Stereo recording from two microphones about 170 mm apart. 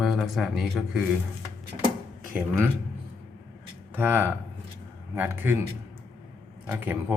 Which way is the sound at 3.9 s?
10° right (ahead or behind).